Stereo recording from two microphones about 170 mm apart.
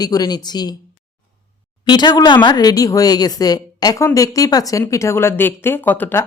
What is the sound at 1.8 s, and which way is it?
Speech, 25° left (ahead or behind).